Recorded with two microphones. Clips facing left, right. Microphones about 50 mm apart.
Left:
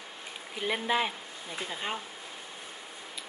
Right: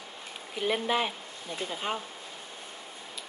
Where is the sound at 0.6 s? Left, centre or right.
Centre.